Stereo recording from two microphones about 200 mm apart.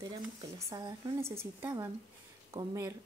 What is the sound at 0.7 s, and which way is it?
Speech, 15° right (ahead or behind).